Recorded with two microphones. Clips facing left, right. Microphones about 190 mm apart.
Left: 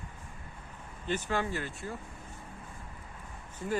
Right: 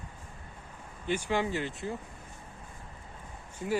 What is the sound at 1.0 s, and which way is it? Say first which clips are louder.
Speech: right 2 dB; 15° right (ahead or behind).